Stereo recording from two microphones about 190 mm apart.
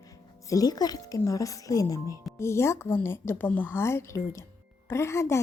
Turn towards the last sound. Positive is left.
turn(degrees=15)  # may be behind; listen again after turning